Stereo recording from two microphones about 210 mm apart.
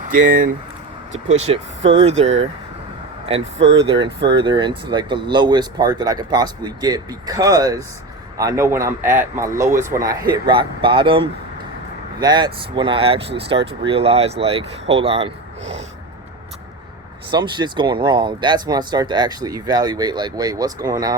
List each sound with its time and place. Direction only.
0.1 s speech: 40° right (ahead or behind)
1.5 s speech: 30° right (ahead or behind)
3.8 s a man's voice: 25° right (ahead or behind)
17.3 s speech: 20° right (ahead or behind)